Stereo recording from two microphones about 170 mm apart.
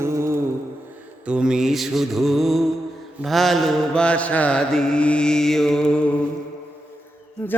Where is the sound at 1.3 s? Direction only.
5° right (ahead or behind).